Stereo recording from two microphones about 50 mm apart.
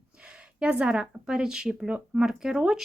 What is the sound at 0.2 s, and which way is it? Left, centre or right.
Speech, right.